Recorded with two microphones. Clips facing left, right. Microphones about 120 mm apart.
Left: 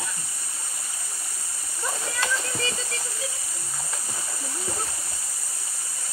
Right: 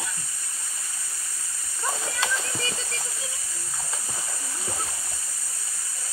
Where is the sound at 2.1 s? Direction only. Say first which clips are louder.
Left 3 dB; centre (ahead or behind).